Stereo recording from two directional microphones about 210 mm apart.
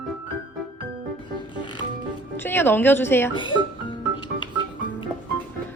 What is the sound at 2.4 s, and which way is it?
Speech, 10° left (ahead or behind).